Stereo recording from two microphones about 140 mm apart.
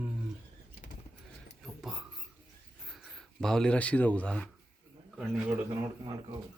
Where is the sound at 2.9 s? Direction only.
Centre (ahead or behind).